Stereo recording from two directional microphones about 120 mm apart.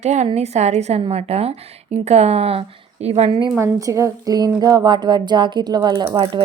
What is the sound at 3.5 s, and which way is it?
A woman's voice, 25° right (ahead or behind).